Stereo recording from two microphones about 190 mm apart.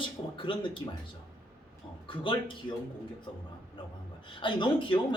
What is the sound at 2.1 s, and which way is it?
Speech, 25° left (ahead or behind).